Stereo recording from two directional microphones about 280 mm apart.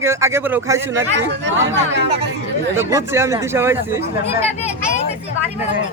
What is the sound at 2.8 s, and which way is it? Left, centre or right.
Speech, centre.